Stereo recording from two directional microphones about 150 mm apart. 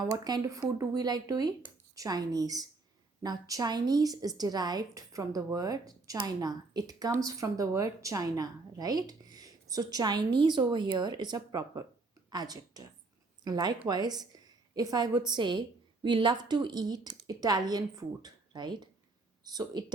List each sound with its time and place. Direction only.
0.0 s a woman's voice: 25° right (ahead or behind)